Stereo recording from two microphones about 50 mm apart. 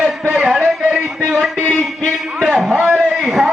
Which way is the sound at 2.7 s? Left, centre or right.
Right.